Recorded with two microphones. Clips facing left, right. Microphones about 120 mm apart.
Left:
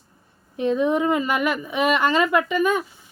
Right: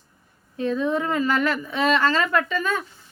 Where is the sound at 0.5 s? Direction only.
20° left (ahead or behind).